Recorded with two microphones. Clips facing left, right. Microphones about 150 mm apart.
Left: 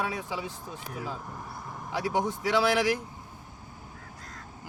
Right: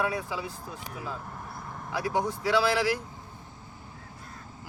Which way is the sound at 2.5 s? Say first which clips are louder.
Even; 20° left (ahead or behind).